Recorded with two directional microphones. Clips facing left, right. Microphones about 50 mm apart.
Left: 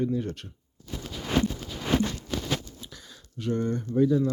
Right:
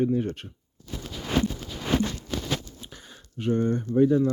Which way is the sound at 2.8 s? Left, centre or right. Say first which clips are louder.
Right 1 dB; right.